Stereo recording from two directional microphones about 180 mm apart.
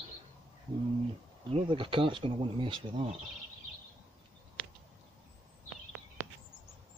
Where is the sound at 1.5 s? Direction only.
30° right (ahead or behind).